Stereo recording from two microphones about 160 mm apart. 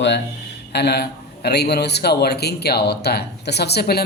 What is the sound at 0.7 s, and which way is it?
A man's voice, 90° left.